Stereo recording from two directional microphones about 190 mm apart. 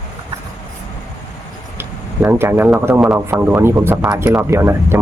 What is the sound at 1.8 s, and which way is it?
Speech, 10° right (ahead or behind).